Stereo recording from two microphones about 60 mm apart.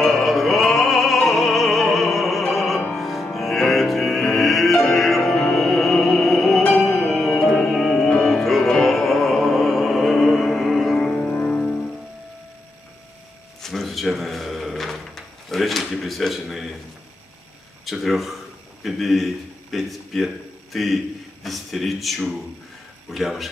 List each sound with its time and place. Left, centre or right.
0.0 s opera: centre
2.9 s music: centre
11.1 s music: left
11.4 s music: centre
13.6 s drawer open or close: centre
17.8 s a sound: centre